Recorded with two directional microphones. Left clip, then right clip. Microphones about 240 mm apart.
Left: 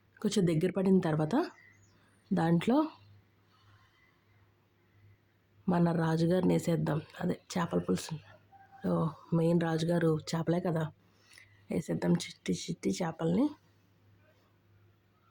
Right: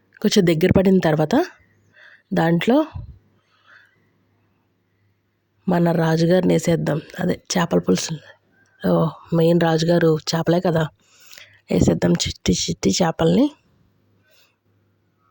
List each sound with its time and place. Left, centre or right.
0.2 s speech: right
5.6 s speech: right